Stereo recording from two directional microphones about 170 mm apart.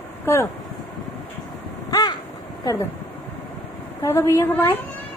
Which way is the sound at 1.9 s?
20° left (ahead or behind).